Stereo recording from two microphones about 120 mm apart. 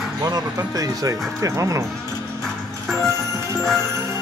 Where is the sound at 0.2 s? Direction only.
30° right (ahead or behind).